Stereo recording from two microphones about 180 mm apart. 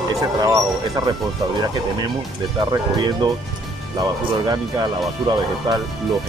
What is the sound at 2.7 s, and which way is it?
Speech, 25° right (ahead or behind).